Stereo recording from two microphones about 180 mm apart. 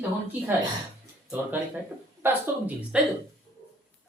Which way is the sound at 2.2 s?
10° right (ahead or behind).